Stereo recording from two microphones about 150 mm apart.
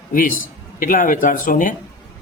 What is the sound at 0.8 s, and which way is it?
Speech, 60° left (ahead or behind).